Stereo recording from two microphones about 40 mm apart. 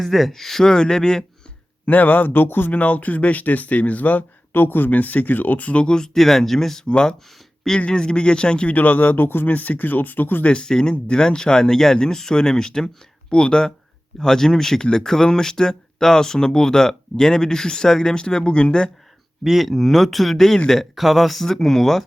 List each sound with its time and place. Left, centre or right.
0.0 s speech: centre
1.9 s speech: left
2.7 s speech: left
4.5 s speech: left
5.7 s speech: left
6.1 s speech: centre
6.8 s speech: centre
8.7 s speech: left
10.4 s speech: left
19.5 s a man's voice: centre